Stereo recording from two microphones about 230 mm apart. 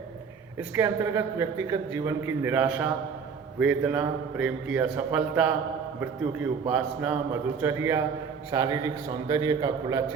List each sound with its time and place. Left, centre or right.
0.8 s a man's voice: centre